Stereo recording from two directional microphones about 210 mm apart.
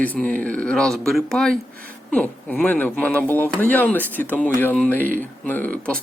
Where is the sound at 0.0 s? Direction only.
5° left (ahead or behind).